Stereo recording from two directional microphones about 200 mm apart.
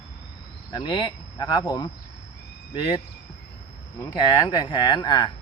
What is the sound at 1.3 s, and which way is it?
Speech, 20° left (ahead or behind).